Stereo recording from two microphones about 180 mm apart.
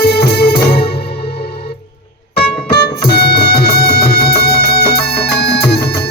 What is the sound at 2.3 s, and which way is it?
Music, 65° left (ahead or behind).